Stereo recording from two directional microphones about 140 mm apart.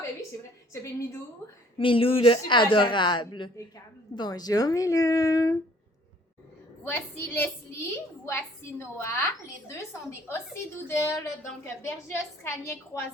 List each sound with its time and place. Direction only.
0.7 s a woman's voice: 20° left (ahead or behind)
1.8 s a woman's voice: 40° left (ahead or behind); by 5.5 s 25° left (ahead or behind)
6.8 s a woman's voice: 15° left (ahead or behind)